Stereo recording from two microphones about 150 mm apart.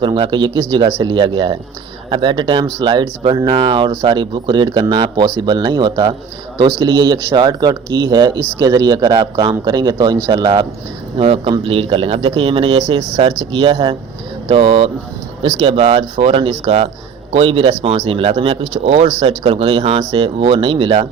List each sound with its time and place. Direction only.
0.0 s speech: 35° right (ahead or behind)